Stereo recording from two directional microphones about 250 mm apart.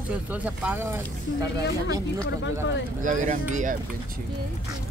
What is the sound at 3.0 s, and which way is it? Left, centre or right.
Speech, right.